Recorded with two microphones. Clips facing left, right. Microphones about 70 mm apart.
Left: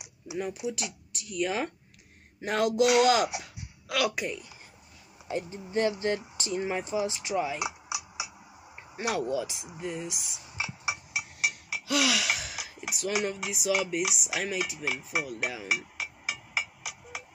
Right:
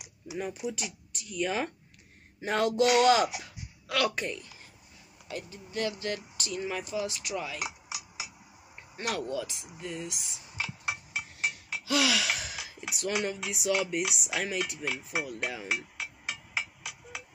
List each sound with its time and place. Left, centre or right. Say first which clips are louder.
0.0 s speech: left 2 dB; centre
2.4 s dishes: left 1 dB; centre
5.3 s speech: left 7 dB; left
8.9 s speech: left 3 dB; centre
9.8 s a sound: left 3 dB; centre
11.7 s a sound: right 1 dB; centre
13.5 s dishes: right 1 dB; centre